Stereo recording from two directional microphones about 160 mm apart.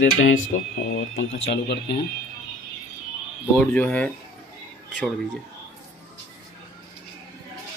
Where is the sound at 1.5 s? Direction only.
90° left.